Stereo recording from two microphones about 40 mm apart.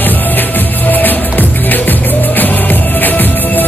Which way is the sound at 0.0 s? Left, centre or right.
Left.